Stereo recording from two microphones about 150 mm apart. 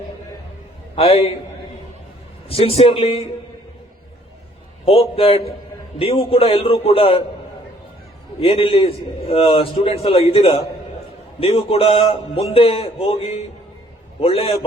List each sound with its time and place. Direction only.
0.9 s a man's voice: 40° left (ahead or behind)
2.5 s a man's voice: 40° left (ahead or behind)
4.9 s a man's voice: 40° left (ahead or behind)
8.4 s a man's voice: 40° left (ahead or behind)